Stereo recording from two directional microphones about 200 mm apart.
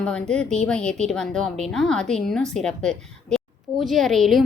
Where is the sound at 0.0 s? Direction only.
5° left (ahead or behind).